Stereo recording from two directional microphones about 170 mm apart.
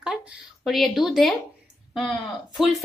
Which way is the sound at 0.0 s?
5° right (ahead or behind).